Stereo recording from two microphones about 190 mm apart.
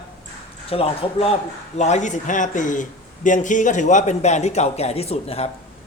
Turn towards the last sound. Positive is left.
turn(degrees=30)  # may be behind; listen again after turning